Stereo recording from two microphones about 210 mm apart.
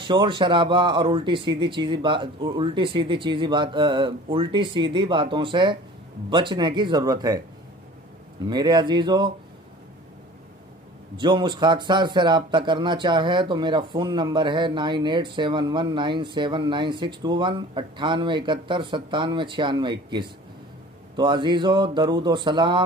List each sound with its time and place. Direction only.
0.0 s speech: 25° right (ahead or behind)
8.5 s speech: 20° right (ahead or behind)
11.1 s speech: 20° right (ahead or behind)